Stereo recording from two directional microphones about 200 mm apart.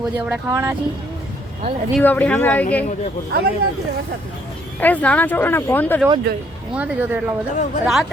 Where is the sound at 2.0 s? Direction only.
10° left (ahead or behind).